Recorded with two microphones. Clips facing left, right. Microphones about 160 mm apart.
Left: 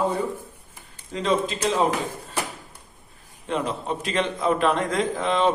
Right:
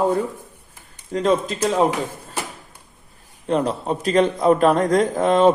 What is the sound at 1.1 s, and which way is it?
Speech, 45° right (ahead or behind).